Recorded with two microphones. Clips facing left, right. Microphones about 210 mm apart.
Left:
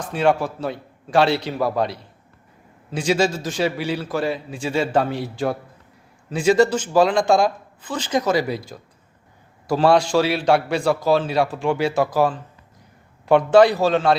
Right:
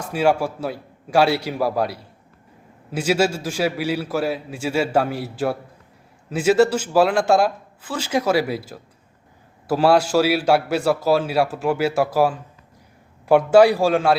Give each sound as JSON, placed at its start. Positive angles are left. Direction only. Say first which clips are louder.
{"t": 0.0, "sound": "a man's voice", "louder": "even", "side_deg": -10}